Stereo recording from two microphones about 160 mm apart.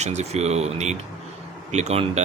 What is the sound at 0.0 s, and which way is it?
Speech, 45° right (ahead or behind).